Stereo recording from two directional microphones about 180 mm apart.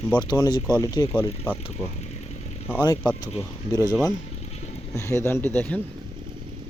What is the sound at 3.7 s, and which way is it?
Speech, 20° left (ahead or behind).